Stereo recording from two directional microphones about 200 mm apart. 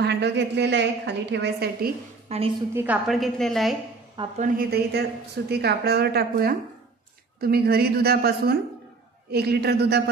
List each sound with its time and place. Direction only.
0.0 s a woman's voice: 60° right (ahead or behind)
2.2 s a woman's voice: 30° right (ahead or behind)
2.7 s a woman's voice: 10° right (ahead or behind)
4.2 s a woman's voice: 20° right (ahead or behind)
4.6 s a woman's voice: 50° right (ahead or behind)